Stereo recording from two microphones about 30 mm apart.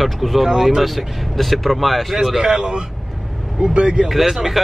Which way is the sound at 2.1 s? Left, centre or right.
Centre.